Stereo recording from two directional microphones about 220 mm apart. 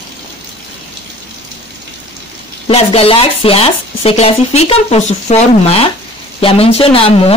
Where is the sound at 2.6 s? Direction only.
25° left (ahead or behind).